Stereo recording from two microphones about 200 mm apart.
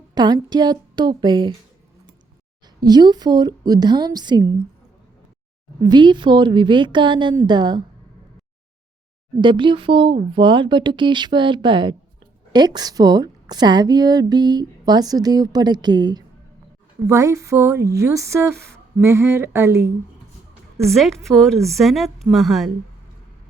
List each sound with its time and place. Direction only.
0.1 s a woman's voice: 20° right (ahead or behind)
2.8 s a woman's voice: 20° right (ahead or behind)
5.8 s a woman's voice: 20° right (ahead or behind)
9.4 s a woman's voice: 25° right (ahead or behind)
20.9 s a woman's voice: centre (ahead or behind)